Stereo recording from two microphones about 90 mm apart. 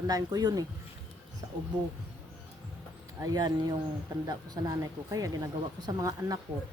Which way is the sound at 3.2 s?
45° right (ahead or behind).